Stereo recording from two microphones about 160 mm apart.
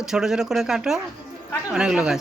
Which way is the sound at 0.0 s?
5° right (ahead or behind).